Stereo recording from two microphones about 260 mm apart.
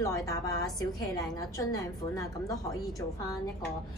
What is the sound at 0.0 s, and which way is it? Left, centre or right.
A woman's voice, centre.